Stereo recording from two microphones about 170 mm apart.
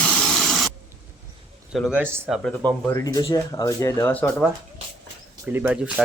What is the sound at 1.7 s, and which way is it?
Speech, 5° right (ahead or behind).